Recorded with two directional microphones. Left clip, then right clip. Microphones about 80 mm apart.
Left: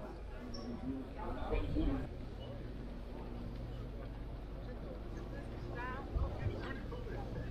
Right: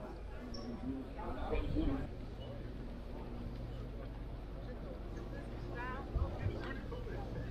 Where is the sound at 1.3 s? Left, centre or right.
Centre.